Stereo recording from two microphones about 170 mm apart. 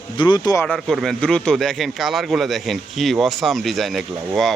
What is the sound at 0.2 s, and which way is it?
Speech, 25° left (ahead or behind).